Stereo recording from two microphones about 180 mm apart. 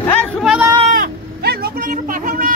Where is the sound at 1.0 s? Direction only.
60° right (ahead or behind).